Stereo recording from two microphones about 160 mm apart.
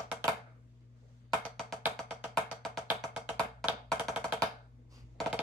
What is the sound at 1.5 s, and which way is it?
Music, centre (ahead or behind).